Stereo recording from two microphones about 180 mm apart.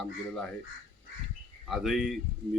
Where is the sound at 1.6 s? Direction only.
Centre (ahead or behind).